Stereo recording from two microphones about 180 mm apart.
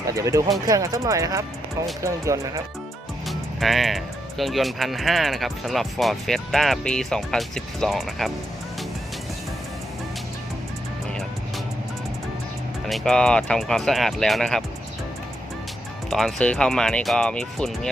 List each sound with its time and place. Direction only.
0.1 s speech: 15° right (ahead or behind)
3.2 s speech: centre (ahead or behind)
12.9 s speech: 5° left (ahead or behind)
16.0 s speech: centre (ahead or behind)